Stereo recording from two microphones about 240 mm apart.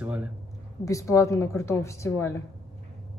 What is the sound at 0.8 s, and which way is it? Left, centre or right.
Speech, centre.